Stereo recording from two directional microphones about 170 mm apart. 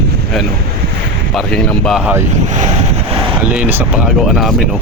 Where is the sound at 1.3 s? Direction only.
5° left (ahead or behind).